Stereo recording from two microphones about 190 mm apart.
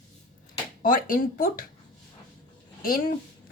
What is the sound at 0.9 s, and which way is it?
Speech, 45° left (ahead or behind).